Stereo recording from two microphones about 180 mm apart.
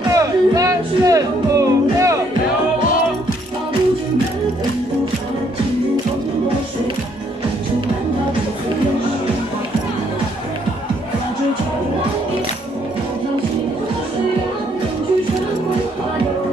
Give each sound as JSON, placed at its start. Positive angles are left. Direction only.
{"t": 0.1, "sound": "music", "side_deg": -20}